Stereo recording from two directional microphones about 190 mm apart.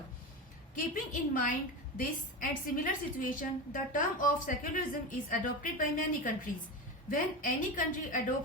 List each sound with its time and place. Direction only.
1.1 s a woman's voice: 45° left (ahead or behind)